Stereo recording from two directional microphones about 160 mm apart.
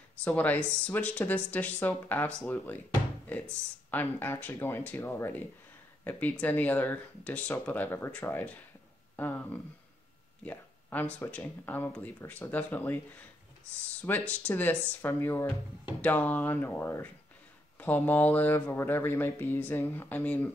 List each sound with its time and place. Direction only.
0.2 s speech: 10° left (ahead or behind)
3.9 s speech: 10° left (ahead or behind)
14.0 s speech: 10° left (ahead or behind)